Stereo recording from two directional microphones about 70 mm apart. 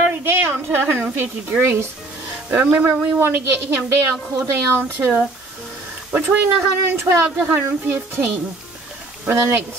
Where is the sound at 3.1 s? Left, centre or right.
Right.